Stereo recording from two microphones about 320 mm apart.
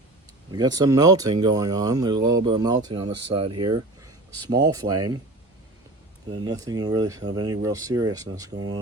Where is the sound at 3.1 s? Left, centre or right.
Right.